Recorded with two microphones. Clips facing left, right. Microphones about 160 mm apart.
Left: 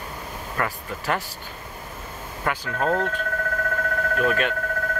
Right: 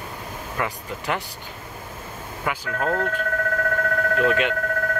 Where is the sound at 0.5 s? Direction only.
15° right (ahead or behind).